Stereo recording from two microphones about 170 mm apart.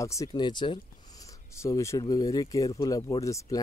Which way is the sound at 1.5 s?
15° left (ahead or behind).